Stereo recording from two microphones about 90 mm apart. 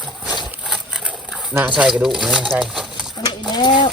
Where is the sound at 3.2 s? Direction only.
50° left (ahead or behind).